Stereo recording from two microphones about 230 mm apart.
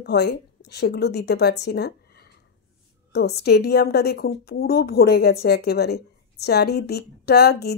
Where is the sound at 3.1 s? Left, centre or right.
Left.